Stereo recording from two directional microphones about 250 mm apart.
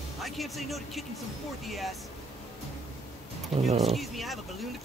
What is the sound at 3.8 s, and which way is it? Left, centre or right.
Speech, centre.